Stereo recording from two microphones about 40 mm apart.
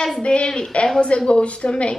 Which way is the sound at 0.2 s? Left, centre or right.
Left.